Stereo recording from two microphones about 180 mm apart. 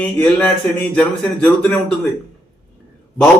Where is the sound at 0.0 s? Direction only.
5° left (ahead or behind).